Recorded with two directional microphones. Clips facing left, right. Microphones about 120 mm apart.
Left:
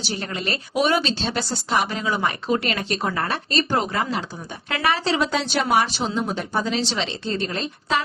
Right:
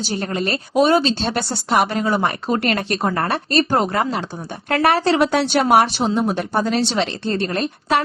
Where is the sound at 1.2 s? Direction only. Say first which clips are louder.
Right 3 dB; 55° right (ahead or behind).